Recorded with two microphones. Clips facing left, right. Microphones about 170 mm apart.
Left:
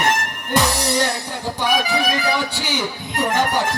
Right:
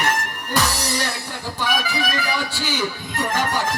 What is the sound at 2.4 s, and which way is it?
Speech, 20° left (ahead or behind).